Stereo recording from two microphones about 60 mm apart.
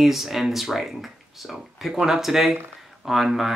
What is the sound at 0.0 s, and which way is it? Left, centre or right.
Speech, centre.